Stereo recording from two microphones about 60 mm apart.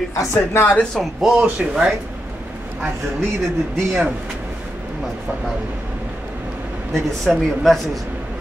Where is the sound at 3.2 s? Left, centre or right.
Centre.